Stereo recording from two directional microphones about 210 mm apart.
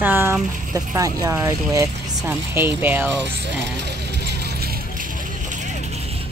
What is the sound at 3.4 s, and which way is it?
Vehicle, 55° right (ahead or behind).